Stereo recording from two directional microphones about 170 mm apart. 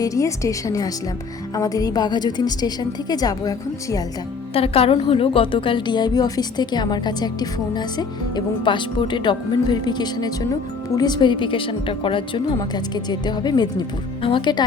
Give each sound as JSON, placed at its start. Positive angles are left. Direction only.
{"t": 0.0, "sound": "a woman's voice", "side_deg": 20}
{"t": 4.5, "sound": "a woman's voice", "side_deg": 35}